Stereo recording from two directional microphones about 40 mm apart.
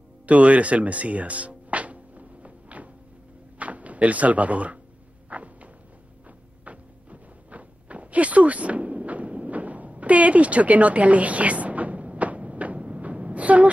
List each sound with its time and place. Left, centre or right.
0.3 s music: right
3.5 s speech: right
5.3 s a sound: right